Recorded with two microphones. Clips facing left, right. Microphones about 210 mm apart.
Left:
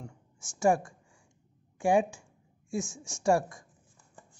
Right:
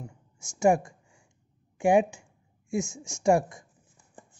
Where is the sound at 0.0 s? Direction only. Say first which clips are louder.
Right 2 dB; 15° right (ahead or behind).